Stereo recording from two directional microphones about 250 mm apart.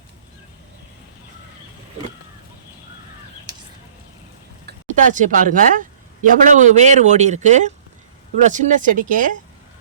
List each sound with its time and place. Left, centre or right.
4.6 s a man's voice: right